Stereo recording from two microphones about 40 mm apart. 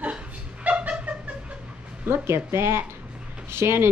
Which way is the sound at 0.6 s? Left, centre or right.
Right.